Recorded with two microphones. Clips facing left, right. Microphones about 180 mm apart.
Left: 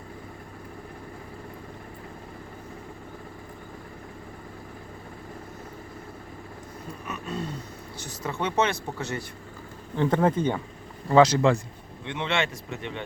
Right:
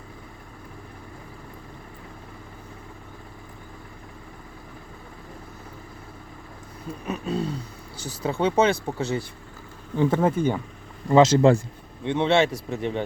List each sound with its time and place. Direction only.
7.1 s speech: 35° right (ahead or behind)
10.0 s speech: 10° right (ahead or behind)
11.1 s speech: 25° right (ahead or behind)
12.0 s speech: 35° right (ahead or behind)